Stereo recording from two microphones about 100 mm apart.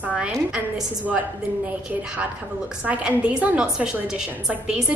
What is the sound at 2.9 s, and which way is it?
A woman's voice, 15° right (ahead or behind).